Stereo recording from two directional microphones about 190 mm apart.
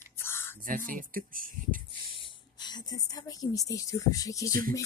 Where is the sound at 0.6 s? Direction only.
45° right (ahead or behind).